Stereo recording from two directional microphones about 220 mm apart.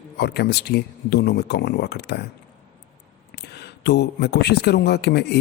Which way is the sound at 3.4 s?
50° left (ahead or behind).